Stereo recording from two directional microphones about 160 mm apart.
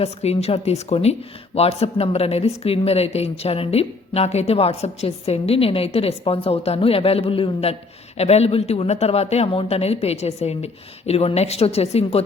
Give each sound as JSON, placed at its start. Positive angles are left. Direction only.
{"t": 0.0, "sound": "speech", "side_deg": 40}